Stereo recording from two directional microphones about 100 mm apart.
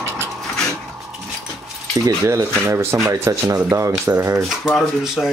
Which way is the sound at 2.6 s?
25° right (ahead or behind).